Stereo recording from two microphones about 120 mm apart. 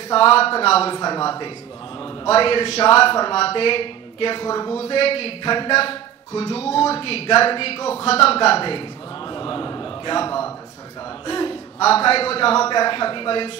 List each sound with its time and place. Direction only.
0.1 s a man's voice: 50° left (ahead or behind)
0.9 s speech: 35° left (ahead or behind)
2.0 s a man's voice: 50° left (ahead or behind)
4.7 s a man's voice: 55° left (ahead or behind)
12.6 s a man's voice: 40° left (ahead or behind)